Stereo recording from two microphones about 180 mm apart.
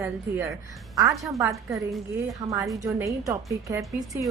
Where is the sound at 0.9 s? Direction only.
20° right (ahead or behind).